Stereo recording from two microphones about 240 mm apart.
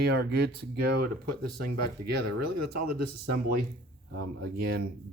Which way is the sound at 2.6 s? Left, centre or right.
Right.